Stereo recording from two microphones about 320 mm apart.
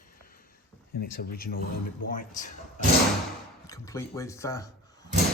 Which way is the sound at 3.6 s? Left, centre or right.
Centre.